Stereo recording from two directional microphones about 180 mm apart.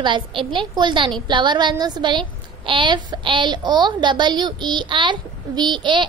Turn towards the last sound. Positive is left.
turn(degrees=-25)  # may be behind; listen again after turning